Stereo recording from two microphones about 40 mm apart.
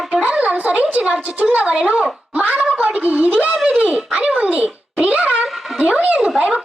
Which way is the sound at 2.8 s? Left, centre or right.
Right.